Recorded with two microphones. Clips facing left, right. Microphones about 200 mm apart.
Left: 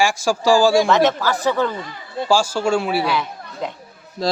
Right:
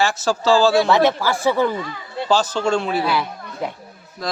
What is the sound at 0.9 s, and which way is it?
Speech, 15° right (ahead or behind).